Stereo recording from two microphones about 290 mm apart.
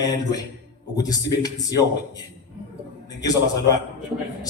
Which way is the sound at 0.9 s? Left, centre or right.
Centre.